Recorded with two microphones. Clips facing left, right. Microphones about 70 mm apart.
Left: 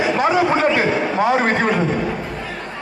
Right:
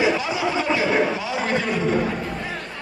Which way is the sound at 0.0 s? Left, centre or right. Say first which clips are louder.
Left 5 dB; left.